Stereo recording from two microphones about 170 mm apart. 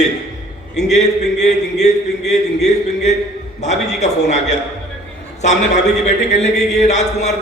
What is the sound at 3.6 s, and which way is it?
Speech, 40° left (ahead or behind).